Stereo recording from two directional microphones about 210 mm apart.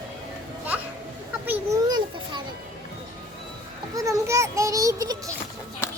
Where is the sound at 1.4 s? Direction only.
10° right (ahead or behind).